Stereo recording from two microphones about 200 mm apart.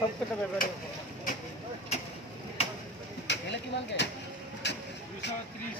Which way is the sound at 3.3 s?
60° left (ahead or behind).